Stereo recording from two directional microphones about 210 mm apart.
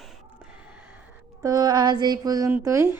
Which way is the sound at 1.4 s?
15° right (ahead or behind).